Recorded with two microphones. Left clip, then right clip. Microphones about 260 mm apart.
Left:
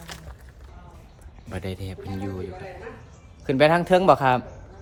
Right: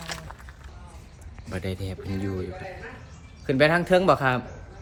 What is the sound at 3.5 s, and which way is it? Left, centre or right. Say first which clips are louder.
Speech: left 2 dB; centre.